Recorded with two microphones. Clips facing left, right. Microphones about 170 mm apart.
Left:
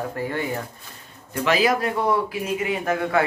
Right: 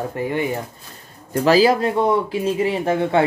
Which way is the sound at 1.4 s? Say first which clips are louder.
Right 6 dB; 30° right (ahead or behind).